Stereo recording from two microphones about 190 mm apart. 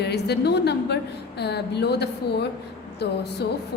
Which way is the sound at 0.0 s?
60° left (ahead or behind).